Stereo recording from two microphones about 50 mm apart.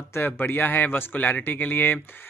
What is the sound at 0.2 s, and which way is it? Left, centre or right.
Speech, left.